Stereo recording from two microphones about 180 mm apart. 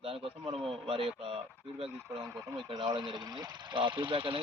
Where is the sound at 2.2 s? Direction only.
15° right (ahead or behind).